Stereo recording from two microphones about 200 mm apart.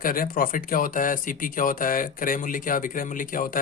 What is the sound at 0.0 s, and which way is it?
A man's voice, 45° left (ahead or behind).